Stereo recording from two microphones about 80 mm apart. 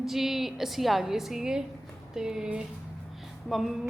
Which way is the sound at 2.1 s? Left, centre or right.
Centre.